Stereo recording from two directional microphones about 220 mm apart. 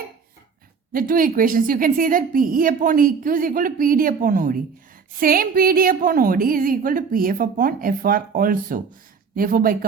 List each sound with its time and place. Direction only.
0.9 s a woman's voice: 40° right (ahead or behind)